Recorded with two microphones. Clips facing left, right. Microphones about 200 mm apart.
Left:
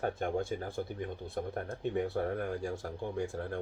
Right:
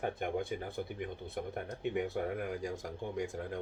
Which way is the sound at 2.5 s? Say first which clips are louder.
Left 2 dB; 15° right (ahead or behind).